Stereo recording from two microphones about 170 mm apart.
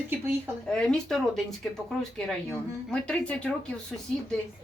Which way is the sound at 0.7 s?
5° left (ahead or behind).